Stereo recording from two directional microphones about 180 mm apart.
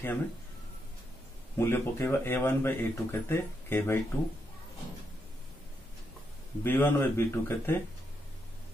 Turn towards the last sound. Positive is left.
turn(degrees=10)  # may be behind; listen again after turning